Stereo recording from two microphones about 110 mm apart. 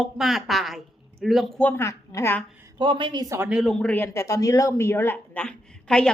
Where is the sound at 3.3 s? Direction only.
20° right (ahead or behind).